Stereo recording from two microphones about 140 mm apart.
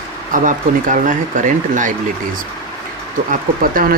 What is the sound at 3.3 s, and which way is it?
Speech, 85° right.